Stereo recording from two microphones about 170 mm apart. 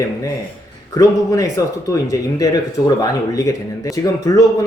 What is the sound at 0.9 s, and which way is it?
A man's voice, 20° left (ahead or behind).